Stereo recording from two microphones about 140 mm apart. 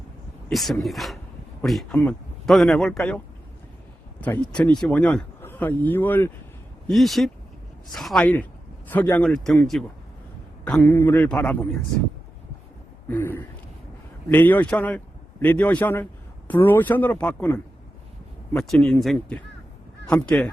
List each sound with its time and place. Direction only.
0.5 s a man's voice: centre (ahead or behind)
4.2 s a man's voice: 10° left (ahead or behind)
6.8 s a man's voice: centre (ahead or behind)
13.1 s a man's voice: 15° left (ahead or behind)
20.1 s speech: 5° left (ahead or behind)